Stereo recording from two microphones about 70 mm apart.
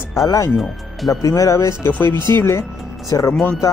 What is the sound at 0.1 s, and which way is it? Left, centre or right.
Speech, left.